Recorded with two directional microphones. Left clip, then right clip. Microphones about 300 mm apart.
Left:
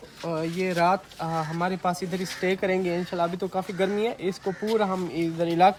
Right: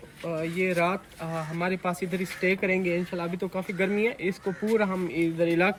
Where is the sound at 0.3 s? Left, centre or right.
Centre.